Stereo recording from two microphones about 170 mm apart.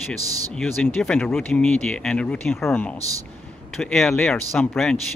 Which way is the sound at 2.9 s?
20° right (ahead or behind).